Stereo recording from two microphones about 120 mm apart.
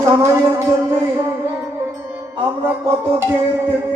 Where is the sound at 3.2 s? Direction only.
20° right (ahead or behind).